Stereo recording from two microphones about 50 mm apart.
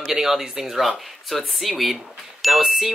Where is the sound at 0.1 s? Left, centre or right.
Centre.